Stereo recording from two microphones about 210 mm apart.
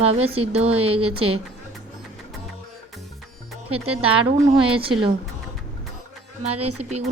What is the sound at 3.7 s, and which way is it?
A woman's voice, 25° right (ahead or behind).